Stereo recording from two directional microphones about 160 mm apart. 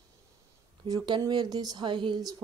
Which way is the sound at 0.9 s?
25° right (ahead or behind).